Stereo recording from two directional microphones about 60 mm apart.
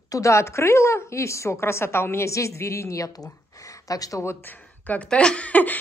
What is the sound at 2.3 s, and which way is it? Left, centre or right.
Speech, left.